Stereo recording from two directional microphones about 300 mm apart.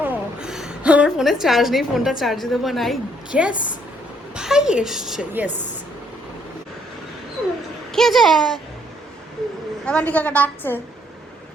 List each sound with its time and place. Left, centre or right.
0.0 s a woman's voice: centre
7.9 s a woman's voice: centre
9.8 s a woman's voice: centre